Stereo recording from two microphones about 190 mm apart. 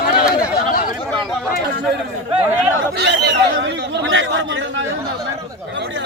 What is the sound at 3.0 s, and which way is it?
Chatter, 65° right (ahead or behind).